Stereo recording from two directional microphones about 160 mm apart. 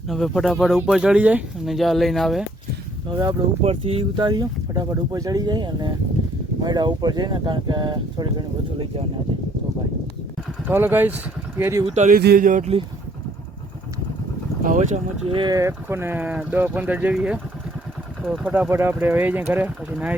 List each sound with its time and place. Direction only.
0.1 s speech: centre (ahead or behind)
3.1 s speech: 25° right (ahead or behind)
3.6 s speech: 35° right (ahead or behind)
10.7 s speech: 15° right (ahead or behind)
11.9 s speech: 45° right (ahead or behind)
12.1 s speech: 70° right (ahead or behind)
14.6 s speech: 55° right (ahead or behind)
15.4 s speech: 20° right (ahead or behind)